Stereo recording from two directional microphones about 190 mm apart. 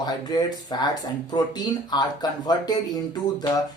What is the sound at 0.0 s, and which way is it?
Speech, 20° left (ahead or behind).